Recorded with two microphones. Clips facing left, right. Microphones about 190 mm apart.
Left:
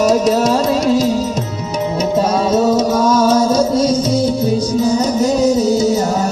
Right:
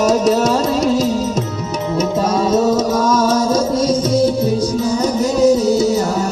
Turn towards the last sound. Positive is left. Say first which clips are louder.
# even
turn(degrees=40)  # may be behind; listen again after turning